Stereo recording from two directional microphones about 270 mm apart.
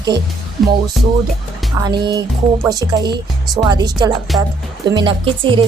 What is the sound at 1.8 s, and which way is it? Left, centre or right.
A woman's voice, centre.